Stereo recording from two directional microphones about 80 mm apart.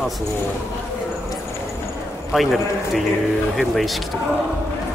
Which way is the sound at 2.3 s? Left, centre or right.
Centre.